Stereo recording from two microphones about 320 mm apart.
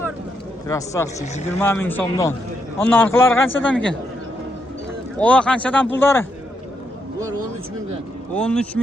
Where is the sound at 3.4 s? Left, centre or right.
Left.